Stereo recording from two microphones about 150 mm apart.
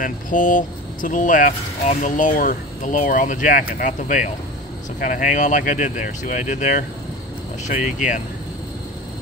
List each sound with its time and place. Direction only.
0.0 s speech: 65° left (ahead or behind)